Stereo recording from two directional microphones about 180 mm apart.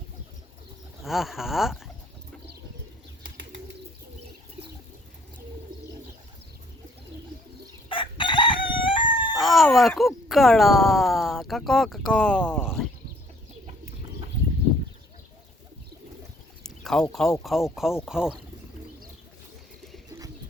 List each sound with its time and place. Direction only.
1.0 s speech: centre (ahead or behind)
7.9 s crowing: 25° left (ahead or behind)
9.4 s speech: centre (ahead or behind)
16.6 s a sound: 5° left (ahead or behind)
17.4 s speech: centre (ahead or behind)